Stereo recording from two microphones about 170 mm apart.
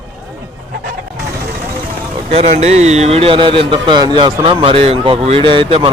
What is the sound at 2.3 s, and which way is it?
A man's voice, 40° right (ahead or behind).